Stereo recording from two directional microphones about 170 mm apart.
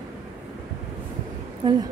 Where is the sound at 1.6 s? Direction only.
25° right (ahead or behind).